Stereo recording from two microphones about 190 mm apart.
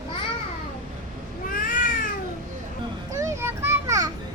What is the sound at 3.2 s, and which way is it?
Children playing, 15° right (ahead or behind).